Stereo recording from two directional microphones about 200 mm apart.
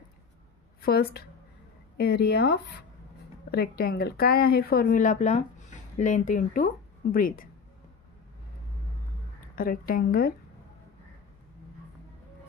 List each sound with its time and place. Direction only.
0.7 s a sound: 50° left (ahead or behind)
2.0 s a woman's voice: 55° left (ahead or behind)
9.6 s a woman's voice: 45° left (ahead or behind)